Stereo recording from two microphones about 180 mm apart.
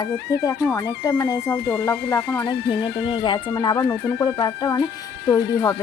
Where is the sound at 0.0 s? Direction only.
20° left (ahead or behind).